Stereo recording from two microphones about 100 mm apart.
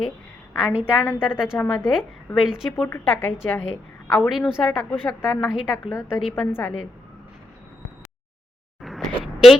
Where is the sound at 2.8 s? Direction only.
20° left (ahead or behind).